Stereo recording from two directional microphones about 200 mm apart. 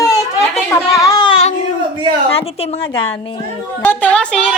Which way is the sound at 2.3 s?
30° left (ahead or behind).